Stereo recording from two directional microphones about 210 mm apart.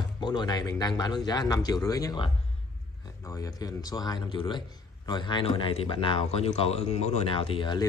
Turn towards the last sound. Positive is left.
turn(degrees=20)  # may be behind; listen again after turning